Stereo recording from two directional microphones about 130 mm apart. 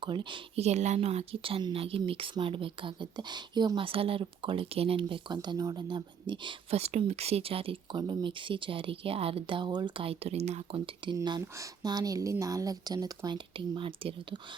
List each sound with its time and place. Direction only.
0.0 s speech: 40° right (ahead or behind)
0.5 s speech: 60° right (ahead or behind); by 6.7 s 40° right (ahead or behind)
6.7 s speech: 55° right (ahead or behind)
11.1 s speech: 30° right (ahead or behind)